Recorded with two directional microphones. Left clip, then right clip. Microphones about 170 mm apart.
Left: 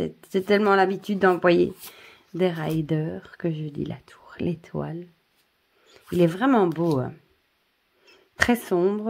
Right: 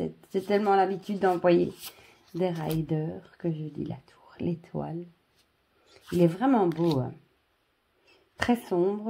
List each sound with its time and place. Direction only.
0.0 s speech: 45° left (ahead or behind)
6.1 s speech: 45° left (ahead or behind)